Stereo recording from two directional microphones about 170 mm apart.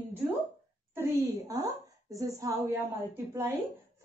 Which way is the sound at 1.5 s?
20° right (ahead or behind).